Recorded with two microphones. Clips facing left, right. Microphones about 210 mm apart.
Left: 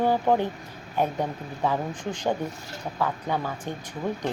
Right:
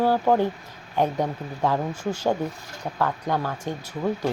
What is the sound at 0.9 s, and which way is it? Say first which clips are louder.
Speech: right 3 dB; 15° right (ahead or behind).